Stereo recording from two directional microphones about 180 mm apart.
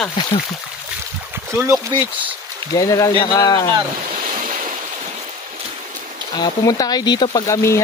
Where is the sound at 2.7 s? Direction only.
20° left (ahead or behind).